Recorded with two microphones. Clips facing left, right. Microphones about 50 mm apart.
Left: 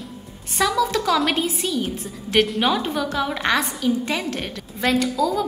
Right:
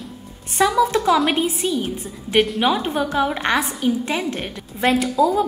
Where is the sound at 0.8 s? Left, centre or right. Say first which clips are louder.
Right 4 dB; right.